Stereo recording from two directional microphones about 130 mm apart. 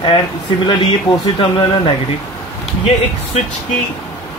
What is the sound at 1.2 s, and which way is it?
Speech, 45° left (ahead or behind).